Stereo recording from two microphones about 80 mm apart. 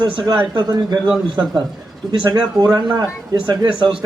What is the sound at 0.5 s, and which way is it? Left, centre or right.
Speech, right.